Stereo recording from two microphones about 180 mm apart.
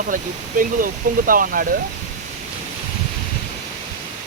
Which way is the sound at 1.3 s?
50° right (ahead or behind).